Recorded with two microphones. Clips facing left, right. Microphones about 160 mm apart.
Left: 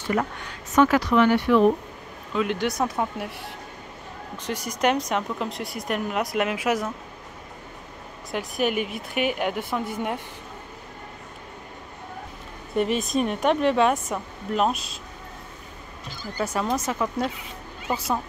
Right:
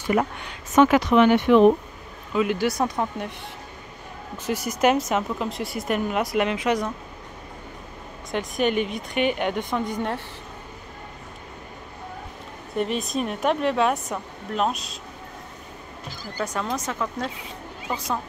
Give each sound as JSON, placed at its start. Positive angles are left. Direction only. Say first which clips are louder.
{"t": 0.0, "sound": "speech", "louder": "right 3 dB", "side_deg": -15}
{"t": 2.3, "sound": "speech", "louder": "right 2 dB", "side_deg": -5}
{"t": 4.5, "sound": "speech", "louder": "right 3 dB", "side_deg": -5}
{"t": 8.3, "sound": "speech", "louder": "right 2 dB", "side_deg": 5}
{"t": 12.7, "sound": "speech", "louder": "left 2 dB", "side_deg": 0}
{"t": 16.3, "sound": "speech", "louder": "left 2 dB", "side_deg": 5}